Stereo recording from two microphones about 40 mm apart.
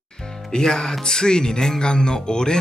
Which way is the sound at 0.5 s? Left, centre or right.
Centre.